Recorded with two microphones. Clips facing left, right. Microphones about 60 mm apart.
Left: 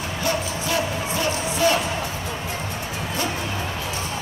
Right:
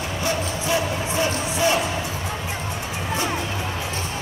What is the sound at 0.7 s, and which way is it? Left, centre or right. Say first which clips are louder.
Music: right 1 dB; right.